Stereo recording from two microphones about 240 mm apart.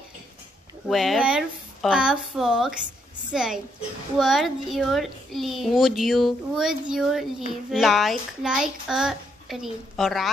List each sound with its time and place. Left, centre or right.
0.8 s a child's voice: centre